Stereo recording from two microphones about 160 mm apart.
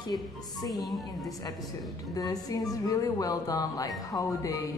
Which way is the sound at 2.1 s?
25° left (ahead or behind).